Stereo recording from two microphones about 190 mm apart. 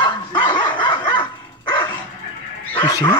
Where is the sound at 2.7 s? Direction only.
20° left (ahead or behind).